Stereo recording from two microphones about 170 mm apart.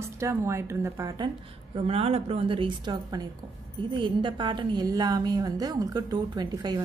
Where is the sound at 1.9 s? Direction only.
35° right (ahead or behind).